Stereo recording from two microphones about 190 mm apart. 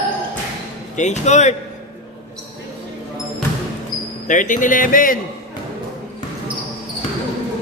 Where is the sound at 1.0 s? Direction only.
40° left (ahead or behind).